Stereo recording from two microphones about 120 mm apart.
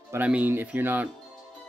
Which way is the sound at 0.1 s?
15° right (ahead or behind).